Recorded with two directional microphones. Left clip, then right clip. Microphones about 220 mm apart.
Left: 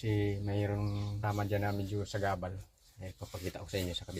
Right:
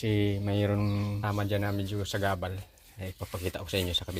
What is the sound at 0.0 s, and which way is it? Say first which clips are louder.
Speech: right 5 dB; 45° right (ahead or behind).